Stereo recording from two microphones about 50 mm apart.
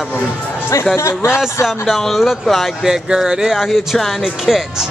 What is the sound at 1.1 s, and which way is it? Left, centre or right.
Speech, left.